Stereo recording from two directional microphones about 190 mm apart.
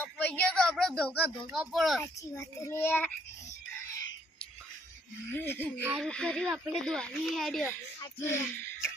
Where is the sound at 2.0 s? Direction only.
15° left (ahead or behind).